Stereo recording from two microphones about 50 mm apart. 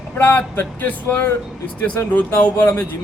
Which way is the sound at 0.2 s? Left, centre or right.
Left.